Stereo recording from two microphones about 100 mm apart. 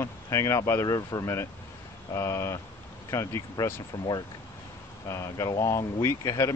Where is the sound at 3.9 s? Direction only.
50° left (ahead or behind).